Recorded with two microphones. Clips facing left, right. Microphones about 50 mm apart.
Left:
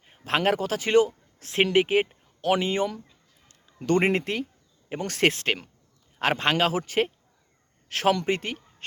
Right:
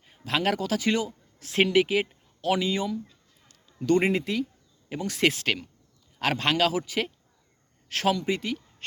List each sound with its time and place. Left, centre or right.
0.0 s a man's voice: left
6.1 s speech: left
8.1 s speech: left